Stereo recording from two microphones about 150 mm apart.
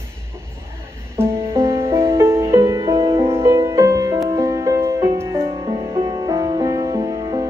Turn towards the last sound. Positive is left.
turn(degrees=-25)  # may be behind; listen again after turning